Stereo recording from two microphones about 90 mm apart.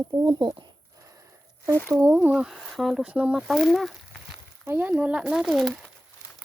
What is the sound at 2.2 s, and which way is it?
Speech, 10° right (ahead or behind).